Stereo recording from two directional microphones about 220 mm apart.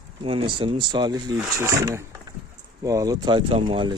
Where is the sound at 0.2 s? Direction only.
25° right (ahead or behind).